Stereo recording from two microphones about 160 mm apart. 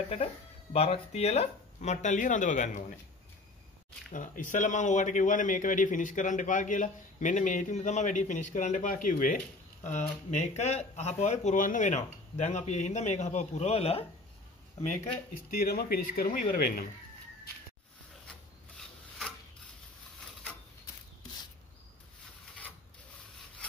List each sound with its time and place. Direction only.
0.7 s speech: 40° left (ahead or behind)
4.1 s speech: 55° left (ahead or behind)
9.8 s speech: 45° left (ahead or behind)
15.5 s speech: 70° left (ahead or behind)
18.8 s a sound: centre (ahead or behind)